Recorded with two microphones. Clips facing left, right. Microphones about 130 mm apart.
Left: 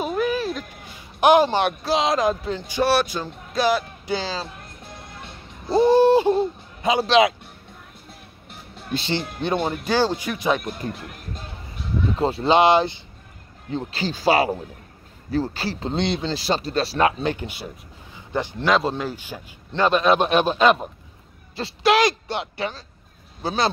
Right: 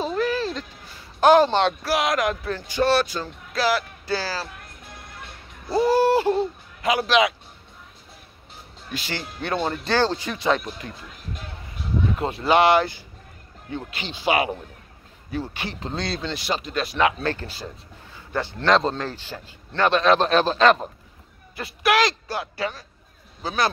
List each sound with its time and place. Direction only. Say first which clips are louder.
0.0 s a sound: left 1 dB; 15° left (ahead or behind)
1.2 s speech: even; 15° left (ahead or behind); by 7.3 s 30° left (ahead or behind)
8.9 s speech: left 6 dB; 25° left (ahead or behind)
9.4 s speech: right 1 dB; 15° left (ahead or behind)
10.9 s speech: left 7 dB; 70° left (ahead or behind)
12.2 s speech: left 2 dB; 30° left (ahead or behind)
13.7 s speech: left 6 dB; 30° left (ahead or behind)
17.2 s speech: left 2 dB; 15° left (ahead or behind)
21.5 s speech: left 2 dB; 25° left (ahead or behind)